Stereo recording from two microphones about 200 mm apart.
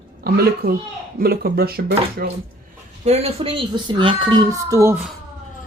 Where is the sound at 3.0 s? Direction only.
30° right (ahead or behind); by 5.0 s 15° right (ahead or behind).